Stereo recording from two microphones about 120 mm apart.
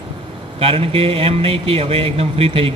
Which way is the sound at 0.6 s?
50° right (ahead or behind).